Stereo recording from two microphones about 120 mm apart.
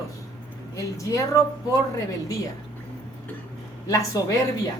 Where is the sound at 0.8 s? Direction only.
25° left (ahead or behind).